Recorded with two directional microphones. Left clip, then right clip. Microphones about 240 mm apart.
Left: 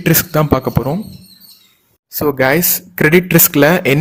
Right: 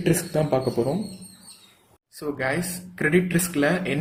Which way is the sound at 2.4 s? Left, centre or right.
Left.